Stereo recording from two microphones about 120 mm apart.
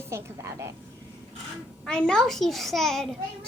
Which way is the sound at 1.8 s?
5° left (ahead or behind).